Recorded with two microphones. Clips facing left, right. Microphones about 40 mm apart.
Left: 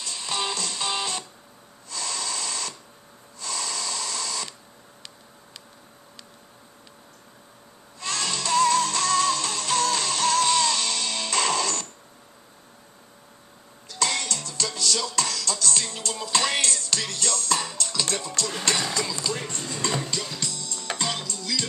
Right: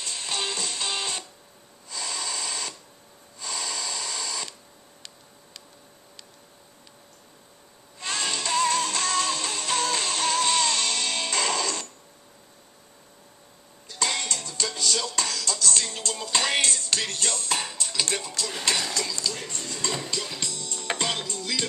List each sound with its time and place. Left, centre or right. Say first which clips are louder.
0.0 s music: even; right
0.3 s music: left 2 dB; centre
1.9 s a sound: left 1 dB; centre
8.0 s music: even; right
11.5 s a sound: left 2 dB; centre
13.8 s music: left 1 dB; centre
15.2 s music: even; centre
16.3 s music: even; centre
16.8 s music: even; right; by 19.1 s centre
19.1 s a sound: left 2 dB; left
19.6 s music: left 1 dB; centre
20.3 s music: even; centre